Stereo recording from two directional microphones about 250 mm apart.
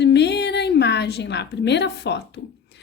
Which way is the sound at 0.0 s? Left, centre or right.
Left.